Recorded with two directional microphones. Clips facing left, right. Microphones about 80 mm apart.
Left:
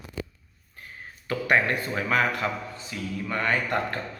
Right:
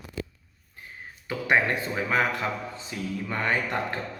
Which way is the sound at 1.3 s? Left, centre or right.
Centre.